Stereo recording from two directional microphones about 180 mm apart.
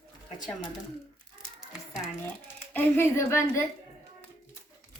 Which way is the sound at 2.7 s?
10° left (ahead or behind).